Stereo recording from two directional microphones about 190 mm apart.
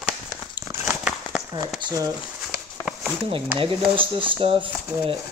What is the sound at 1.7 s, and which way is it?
Speech, 20° right (ahead or behind).